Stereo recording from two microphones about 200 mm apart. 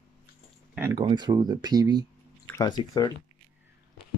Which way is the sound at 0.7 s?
15° right (ahead or behind).